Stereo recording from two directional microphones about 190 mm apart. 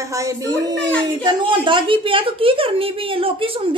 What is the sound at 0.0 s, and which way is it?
Speech, 15° right (ahead or behind).